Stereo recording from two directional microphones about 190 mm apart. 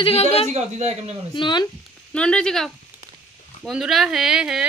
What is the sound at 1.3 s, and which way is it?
Speech, 25° left (ahead or behind).